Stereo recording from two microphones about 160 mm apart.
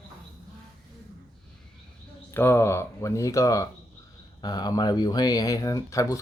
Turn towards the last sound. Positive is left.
turn(degrees=20)  # may be behind; listen again after turning